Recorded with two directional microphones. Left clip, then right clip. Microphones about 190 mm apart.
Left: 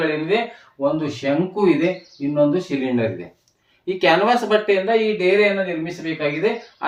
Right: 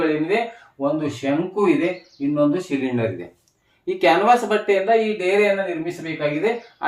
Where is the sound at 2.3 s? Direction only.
5° left (ahead or behind).